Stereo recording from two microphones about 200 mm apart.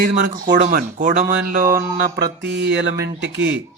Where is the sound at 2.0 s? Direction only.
50° right (ahead or behind).